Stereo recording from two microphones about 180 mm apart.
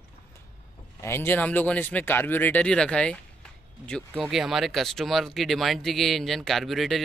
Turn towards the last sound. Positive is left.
turn(degrees=0)  # may be behind; listen again after turning